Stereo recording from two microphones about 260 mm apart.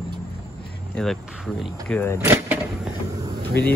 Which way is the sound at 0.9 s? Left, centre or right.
Centre.